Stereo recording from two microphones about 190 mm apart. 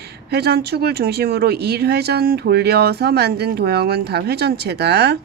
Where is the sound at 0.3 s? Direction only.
60° right (ahead or behind).